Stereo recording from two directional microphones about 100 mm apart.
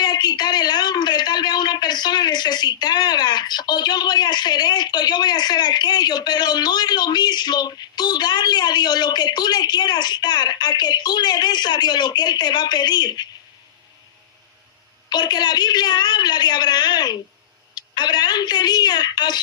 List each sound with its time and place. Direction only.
0.0 s a man's voice: 45° left (ahead or behind)
15.1 s a woman's voice: 45° left (ahead or behind)